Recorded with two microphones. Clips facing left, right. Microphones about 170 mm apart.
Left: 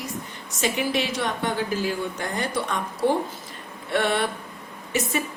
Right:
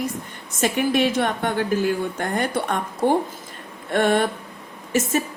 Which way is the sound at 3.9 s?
50° right (ahead or behind).